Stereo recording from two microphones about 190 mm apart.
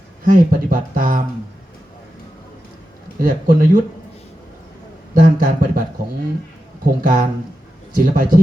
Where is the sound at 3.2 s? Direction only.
45° right (ahead or behind).